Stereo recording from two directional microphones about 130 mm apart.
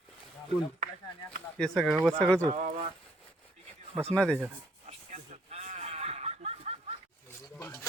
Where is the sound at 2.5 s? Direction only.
55° right (ahead or behind).